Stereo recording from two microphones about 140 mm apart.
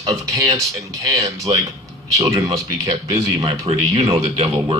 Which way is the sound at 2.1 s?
25° right (ahead or behind).